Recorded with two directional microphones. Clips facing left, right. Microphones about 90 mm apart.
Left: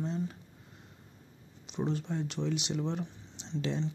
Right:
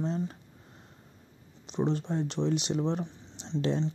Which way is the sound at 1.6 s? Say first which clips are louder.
Right 4 dB; 35° right (ahead or behind).